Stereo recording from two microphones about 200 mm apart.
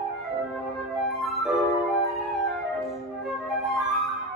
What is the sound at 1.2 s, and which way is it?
Music, centre (ahead or behind).